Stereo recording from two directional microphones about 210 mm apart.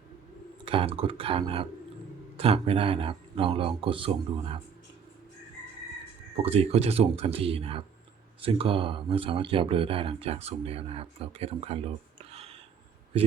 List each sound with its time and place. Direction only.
0.6 s speech: 25° right (ahead or behind)
6.3 s speech: 30° right (ahead or behind)
12.2 s a sound: 30° right (ahead or behind)